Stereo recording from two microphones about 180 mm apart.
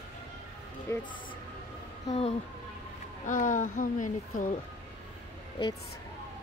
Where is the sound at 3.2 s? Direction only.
45° left (ahead or behind).